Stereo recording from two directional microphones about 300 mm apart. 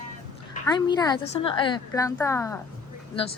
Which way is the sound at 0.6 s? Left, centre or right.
Centre.